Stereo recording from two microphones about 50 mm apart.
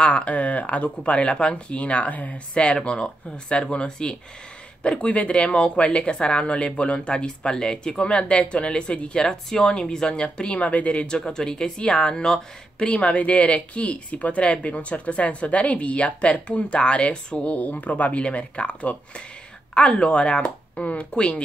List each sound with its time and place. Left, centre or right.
0.0 s speech: left
11.1 s speech: centre
12.9 s speech: left
17.6 s speech: left